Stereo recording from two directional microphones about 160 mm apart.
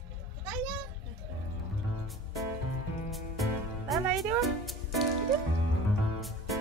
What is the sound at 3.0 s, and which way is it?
Music, centre (ahead or behind).